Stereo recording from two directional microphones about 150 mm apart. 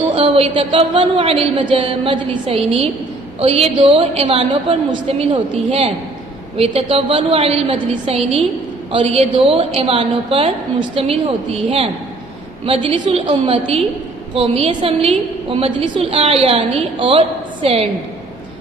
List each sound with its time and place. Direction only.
0.1 s a woman's voice: 35° right (ahead or behind)